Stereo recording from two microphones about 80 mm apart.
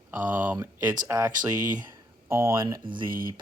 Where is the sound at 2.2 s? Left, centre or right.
Right.